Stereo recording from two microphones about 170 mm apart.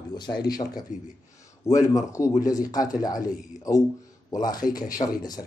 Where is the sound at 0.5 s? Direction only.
25° left (ahead or behind).